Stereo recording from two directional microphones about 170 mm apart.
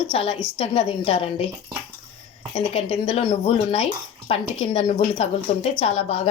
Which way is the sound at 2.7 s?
35° left (ahead or behind).